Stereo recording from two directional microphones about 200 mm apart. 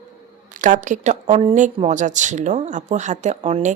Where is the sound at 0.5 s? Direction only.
40° right (ahead or behind).